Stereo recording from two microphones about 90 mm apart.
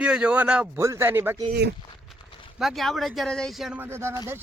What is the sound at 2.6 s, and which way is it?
Speech, centre (ahead or behind).